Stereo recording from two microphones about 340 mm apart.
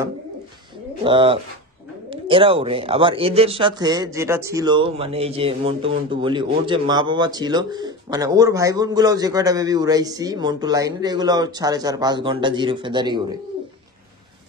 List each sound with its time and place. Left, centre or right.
1.0 s speech: centre